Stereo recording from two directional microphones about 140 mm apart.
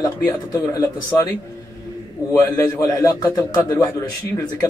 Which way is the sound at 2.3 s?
20° left (ahead or behind).